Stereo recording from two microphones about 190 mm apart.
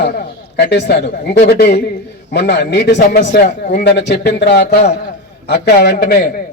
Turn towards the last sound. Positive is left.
turn(degrees=55)  # may be behind; listen again after turning